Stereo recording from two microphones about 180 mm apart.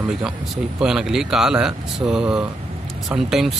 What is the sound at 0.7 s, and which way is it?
Speech, 5° right (ahead or behind).